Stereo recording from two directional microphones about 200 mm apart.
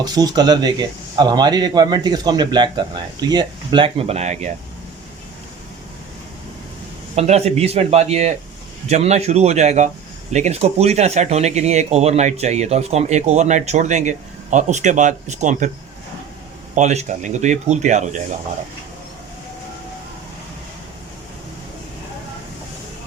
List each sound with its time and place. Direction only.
0.0 s speech: 20° right (ahead or behind); by 4.5 s 35° right (ahead or behind)
7.2 s speech: 30° right (ahead or behind)
16.7 s speech: 35° right (ahead or behind)